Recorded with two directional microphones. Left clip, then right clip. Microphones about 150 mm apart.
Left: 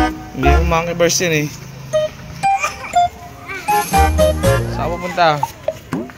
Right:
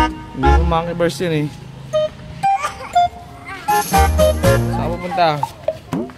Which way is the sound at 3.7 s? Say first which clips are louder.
Left 1 dB; centre (ahead or behind).